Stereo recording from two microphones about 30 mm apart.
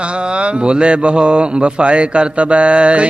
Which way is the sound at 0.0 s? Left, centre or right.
Right.